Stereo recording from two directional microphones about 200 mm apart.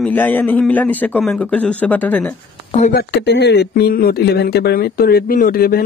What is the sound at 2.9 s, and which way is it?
Speech, 60° left (ahead or behind).